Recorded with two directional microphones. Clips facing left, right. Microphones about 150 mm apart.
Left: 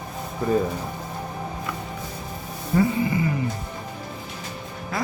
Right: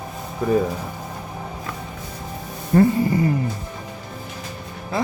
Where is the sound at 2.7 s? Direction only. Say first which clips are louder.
Right 5 dB; 40° right (ahead or behind).